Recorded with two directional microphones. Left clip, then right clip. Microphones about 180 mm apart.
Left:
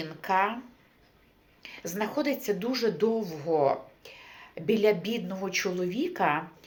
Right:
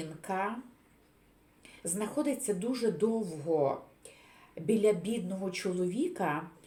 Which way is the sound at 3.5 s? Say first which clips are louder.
Left 4 dB; 30° left (ahead or behind).